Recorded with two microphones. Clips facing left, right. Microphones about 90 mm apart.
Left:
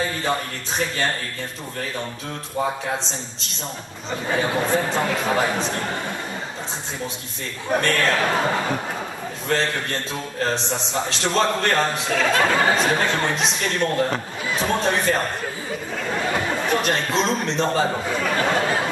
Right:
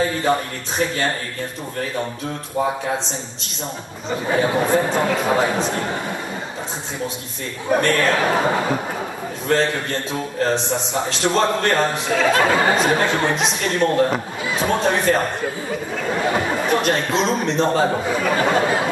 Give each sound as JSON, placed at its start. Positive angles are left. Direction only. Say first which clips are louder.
{"t": 4.3, "sound": "speech", "louder": "right 3 dB", "side_deg": -10}
{"t": 7.7, "sound": "speech", "louder": "right 3 dB", "side_deg": -10}
{"t": 10.4, "sound": "a man's voice", "louder": "right 4 dB", "side_deg": -5}